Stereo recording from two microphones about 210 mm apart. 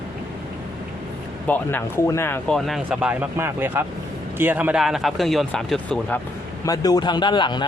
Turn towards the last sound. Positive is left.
turn(degrees=20)  # may be behind; listen again after turning